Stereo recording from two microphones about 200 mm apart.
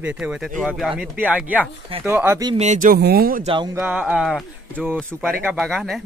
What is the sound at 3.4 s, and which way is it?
Speech, 25° right (ahead or behind).